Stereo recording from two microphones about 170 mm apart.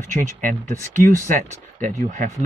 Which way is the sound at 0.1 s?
45° right (ahead or behind).